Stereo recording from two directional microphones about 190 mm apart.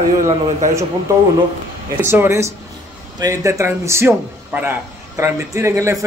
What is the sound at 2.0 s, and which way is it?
A man's voice, 10° right (ahead or behind).